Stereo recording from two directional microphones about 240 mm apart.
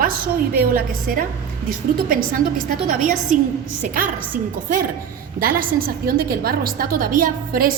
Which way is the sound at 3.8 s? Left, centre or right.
Right.